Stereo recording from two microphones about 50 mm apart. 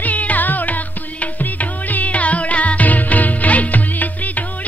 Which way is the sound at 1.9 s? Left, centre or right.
Left.